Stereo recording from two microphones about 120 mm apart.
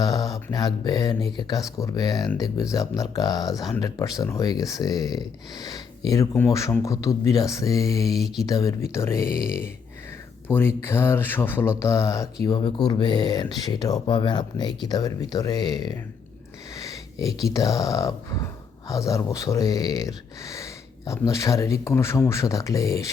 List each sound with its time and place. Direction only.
0.0 s a sound: 30° left (ahead or behind)
0.5 s speech: 35° left (ahead or behind)
6.3 s speech: 20° left (ahead or behind)
8.1 s mantra: centre (ahead or behind)
8.4 s speech: 30° left (ahead or behind)
10.5 s speech: 20° left (ahead or behind)
12.5 s speech: 40° left (ahead or behind)
16.7 s sniff: 30° left (ahead or behind)
17.5 s speech: 30° left (ahead or behind)